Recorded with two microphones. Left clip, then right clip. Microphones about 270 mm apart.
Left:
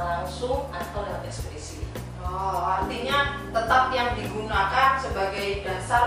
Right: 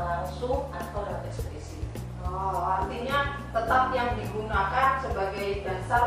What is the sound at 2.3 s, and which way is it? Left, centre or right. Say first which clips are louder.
Music: left 2 dB; centre.